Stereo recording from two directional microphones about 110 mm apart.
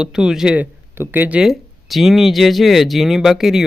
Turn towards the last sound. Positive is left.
turn(degrees=-5)  # may be behind; listen again after turning